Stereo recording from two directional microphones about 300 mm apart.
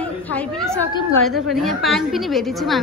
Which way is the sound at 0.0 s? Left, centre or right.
Centre.